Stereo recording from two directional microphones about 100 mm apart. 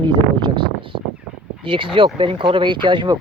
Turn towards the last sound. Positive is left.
turn(degrees=-55)  # may be behind; listen again after turning